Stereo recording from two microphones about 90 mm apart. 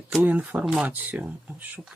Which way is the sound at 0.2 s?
20° right (ahead or behind).